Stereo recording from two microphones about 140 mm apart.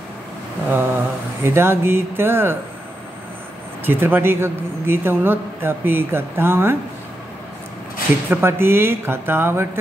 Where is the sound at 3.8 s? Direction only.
15° right (ahead or behind).